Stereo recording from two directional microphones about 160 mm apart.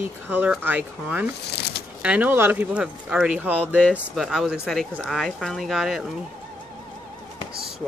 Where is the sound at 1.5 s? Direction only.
90° left.